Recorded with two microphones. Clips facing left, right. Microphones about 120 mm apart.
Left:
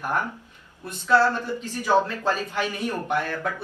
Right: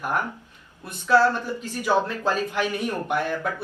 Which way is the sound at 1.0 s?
15° right (ahead or behind).